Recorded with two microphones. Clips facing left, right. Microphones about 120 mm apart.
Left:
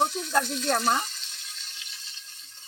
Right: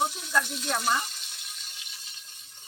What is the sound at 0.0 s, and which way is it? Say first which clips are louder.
Frying: left 3 dB; 10° right (ahead or behind).